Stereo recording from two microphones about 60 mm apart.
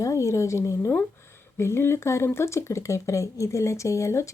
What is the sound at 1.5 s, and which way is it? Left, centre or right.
Speech, left.